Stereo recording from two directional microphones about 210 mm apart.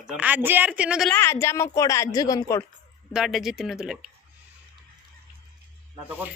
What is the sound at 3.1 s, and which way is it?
Speech, centre (ahead or behind).